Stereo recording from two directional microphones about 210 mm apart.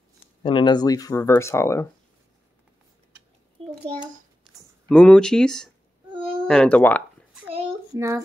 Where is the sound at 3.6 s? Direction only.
25° right (ahead or behind).